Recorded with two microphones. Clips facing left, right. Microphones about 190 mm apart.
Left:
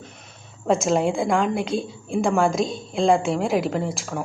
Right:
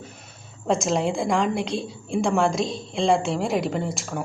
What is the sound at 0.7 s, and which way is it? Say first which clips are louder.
A woman's voice: left 2 dB; centre (ahead or behind).